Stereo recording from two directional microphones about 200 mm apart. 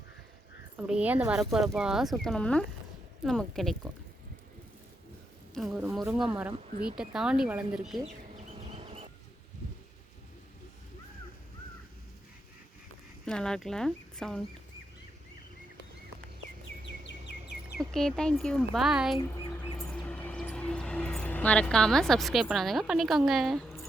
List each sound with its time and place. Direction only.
0.8 s speech: 5° right (ahead or behind)
5.5 s speech: 5° right (ahead or behind)
8.5 s bee: 30° right (ahead or behind)
13.2 s speech: 5° left (ahead or behind)
16.8 s bird: 65° left (ahead or behind)
17.7 s speech: centre (ahead or behind)
19.8 s music: 5° left (ahead or behind)